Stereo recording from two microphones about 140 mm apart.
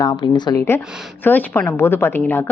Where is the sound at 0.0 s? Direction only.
30° left (ahead or behind).